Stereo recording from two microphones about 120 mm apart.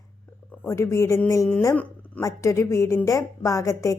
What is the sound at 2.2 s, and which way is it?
A woman's voice, 25° left (ahead or behind).